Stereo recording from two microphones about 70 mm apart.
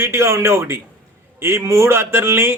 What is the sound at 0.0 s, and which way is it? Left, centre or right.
Speech, right.